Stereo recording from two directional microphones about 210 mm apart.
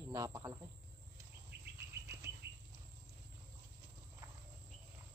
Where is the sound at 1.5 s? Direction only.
50° right (ahead or behind).